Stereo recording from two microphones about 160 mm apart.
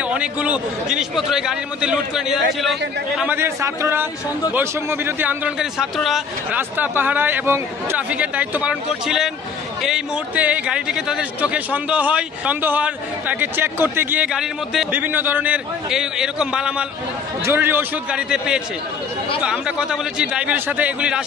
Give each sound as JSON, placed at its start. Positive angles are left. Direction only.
{"t": 0.1, "sound": "a man's voice", "side_deg": -5}
{"t": 3.3, "sound": "a man's voice", "side_deg": -15}